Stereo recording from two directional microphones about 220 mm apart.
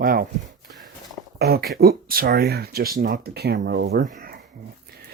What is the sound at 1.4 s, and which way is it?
Speech, 45° right (ahead or behind).